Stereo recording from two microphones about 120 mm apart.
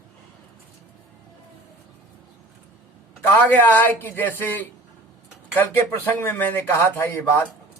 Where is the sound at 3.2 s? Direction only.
15° left (ahead or behind).